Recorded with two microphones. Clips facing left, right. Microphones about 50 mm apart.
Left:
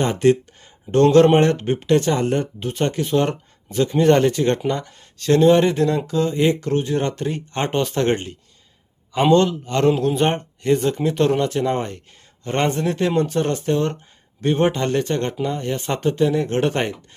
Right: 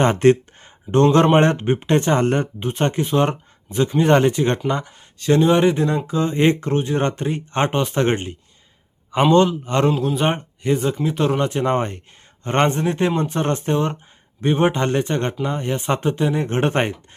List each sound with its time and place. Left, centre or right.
0.0 s speech: right
1.4 s a man's voice: right
2.6 s speech: right
6.3 s speech: right; by 11.3 s centre
11.3 s a man's voice: right